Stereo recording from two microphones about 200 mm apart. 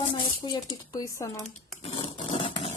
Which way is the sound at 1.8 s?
25° left (ahead or behind).